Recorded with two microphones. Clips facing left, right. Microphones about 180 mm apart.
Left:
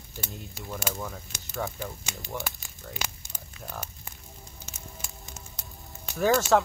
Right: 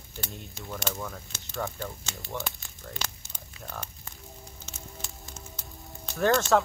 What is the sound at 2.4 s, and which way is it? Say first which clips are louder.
Speech: even; 5° left (ahead or behind).